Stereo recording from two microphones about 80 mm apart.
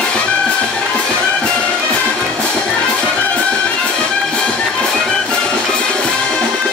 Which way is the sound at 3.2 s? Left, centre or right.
Centre.